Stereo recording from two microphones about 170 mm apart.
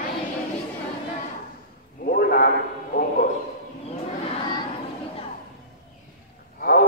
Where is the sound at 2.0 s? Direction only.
55° left (ahead or behind).